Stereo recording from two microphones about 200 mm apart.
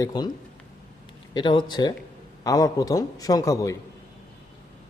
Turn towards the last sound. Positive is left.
turn(degrees=15)  # may be behind; listen again after turning